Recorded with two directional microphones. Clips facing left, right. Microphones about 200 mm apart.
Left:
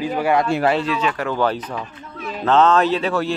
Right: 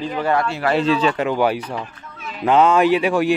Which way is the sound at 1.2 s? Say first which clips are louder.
Right 2 dB; 15° right (ahead or behind).